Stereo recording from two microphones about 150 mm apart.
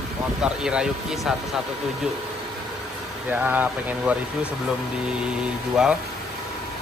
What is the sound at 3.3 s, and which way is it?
Speech, 10° right (ahead or behind).